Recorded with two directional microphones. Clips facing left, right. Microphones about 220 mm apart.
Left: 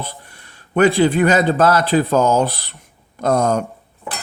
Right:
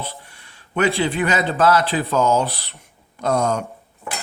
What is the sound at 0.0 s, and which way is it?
A man's voice, 45° left (ahead or behind).